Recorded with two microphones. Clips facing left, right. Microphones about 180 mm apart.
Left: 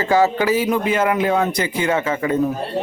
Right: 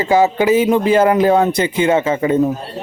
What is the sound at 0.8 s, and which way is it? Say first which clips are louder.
A man's voice: right 6 dB; 35° right (ahead or behind).